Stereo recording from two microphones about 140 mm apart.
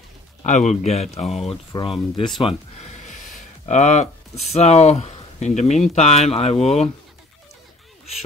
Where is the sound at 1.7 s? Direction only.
35° left (ahead or behind).